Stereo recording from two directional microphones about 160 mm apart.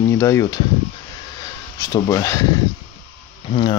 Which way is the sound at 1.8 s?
20° left (ahead or behind).